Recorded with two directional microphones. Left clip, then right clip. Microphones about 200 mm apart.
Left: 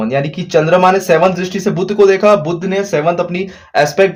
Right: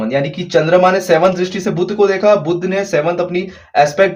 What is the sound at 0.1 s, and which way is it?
Speech, 40° left (ahead or behind).